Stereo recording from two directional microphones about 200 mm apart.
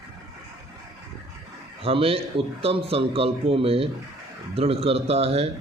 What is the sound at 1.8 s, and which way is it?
A man's voice, 30° right (ahead or behind).